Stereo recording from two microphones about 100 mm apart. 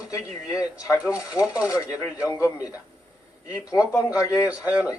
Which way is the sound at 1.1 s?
35° left (ahead or behind).